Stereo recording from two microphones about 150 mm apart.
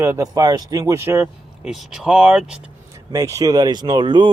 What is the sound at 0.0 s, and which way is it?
Speech, 20° right (ahead or behind).